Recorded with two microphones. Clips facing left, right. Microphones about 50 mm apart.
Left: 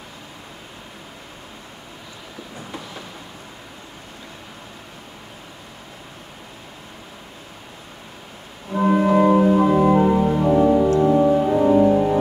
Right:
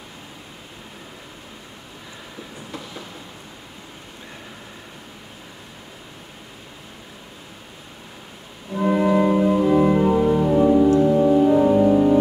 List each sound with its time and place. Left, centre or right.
8.8 s music: centre
10.4 s music: centre
11.0 s organ: centre